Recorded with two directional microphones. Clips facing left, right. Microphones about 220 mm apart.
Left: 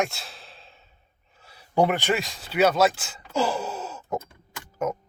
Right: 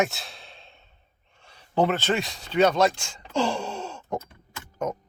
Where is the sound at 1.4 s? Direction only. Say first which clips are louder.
Left 1 dB; 10° left (ahead or behind).